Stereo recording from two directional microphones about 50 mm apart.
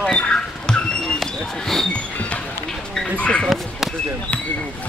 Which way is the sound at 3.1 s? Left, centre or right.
Left.